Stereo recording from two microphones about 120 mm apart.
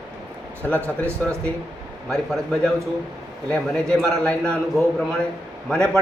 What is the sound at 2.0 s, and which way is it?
A man's voice, centre (ahead or behind).